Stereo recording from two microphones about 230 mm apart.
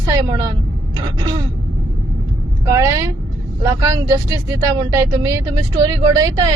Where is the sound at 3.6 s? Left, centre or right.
Centre.